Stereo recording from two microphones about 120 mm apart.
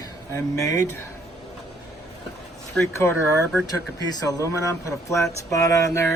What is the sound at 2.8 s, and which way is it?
Speech, 20° left (ahead or behind).